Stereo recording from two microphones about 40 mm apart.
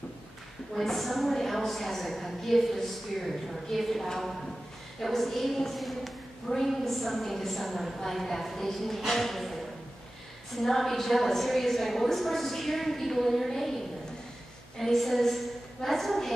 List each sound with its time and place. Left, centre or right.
0.7 s a woman's voice: centre